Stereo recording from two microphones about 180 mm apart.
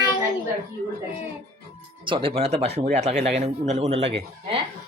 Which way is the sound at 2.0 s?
30° right (ahead or behind).